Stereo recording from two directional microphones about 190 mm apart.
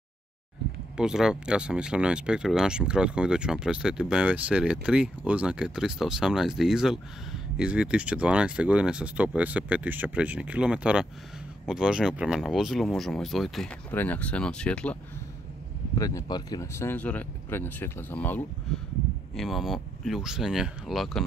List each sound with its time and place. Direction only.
0.9 s speech: 5° right (ahead or behind)
16.0 s speech: 15° left (ahead or behind); by 21.2 s centre (ahead or behind)